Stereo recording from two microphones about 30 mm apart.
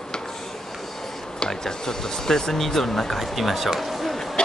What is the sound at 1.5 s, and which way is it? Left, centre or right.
Speech, centre.